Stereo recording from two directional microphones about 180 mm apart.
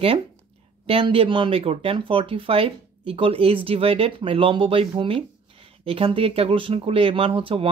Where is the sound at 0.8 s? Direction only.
30° right (ahead or behind).